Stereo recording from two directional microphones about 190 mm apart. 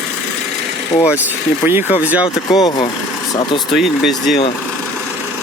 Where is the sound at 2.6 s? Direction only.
20° left (ahead or behind).